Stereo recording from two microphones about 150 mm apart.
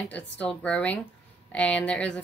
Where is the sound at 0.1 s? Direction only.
10° left (ahead or behind).